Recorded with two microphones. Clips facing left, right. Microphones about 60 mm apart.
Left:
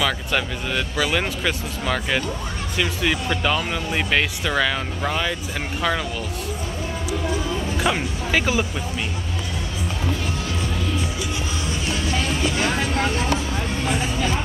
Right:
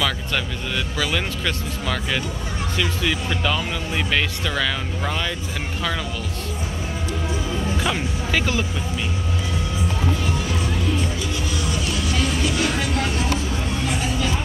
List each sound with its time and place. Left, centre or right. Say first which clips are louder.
0.0 s speech: left 1 dB; centre
7.7 s speech: left 3 dB; centre
12.1 s music: even; left
12.8 s a sound: left 1 dB; left